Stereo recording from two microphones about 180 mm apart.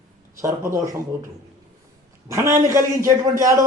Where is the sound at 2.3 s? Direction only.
15° right (ahead or behind).